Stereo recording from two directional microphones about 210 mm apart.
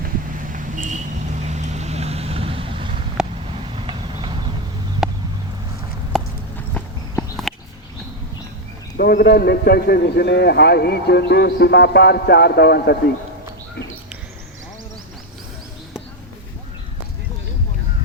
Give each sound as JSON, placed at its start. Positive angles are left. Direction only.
{"t": 0.5, "sound": "vehicle", "side_deg": -40}
{"t": 3.2, "sound": "vehicle", "side_deg": -5}
{"t": 3.8, "sound": "clip-clop", "side_deg": -25}
{"t": 5.0, "sound": "a sound", "side_deg": 0}
{"t": 6.1, "sound": "clip-clop", "side_deg": 0}
{"t": 6.7, "sound": "walk", "side_deg": 5}
{"t": 9.0, "sound": "a man's voice", "side_deg": 45}